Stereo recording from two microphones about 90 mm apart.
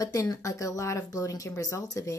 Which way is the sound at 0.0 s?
40° left (ahead or behind).